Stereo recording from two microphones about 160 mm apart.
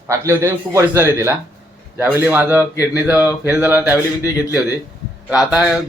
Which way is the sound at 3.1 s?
20° left (ahead or behind).